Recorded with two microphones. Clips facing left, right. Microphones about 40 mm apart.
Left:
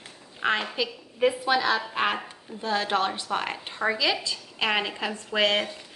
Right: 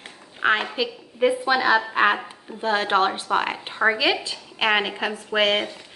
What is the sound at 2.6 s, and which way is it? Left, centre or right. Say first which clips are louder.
A woman's voice: right 5 dB; right.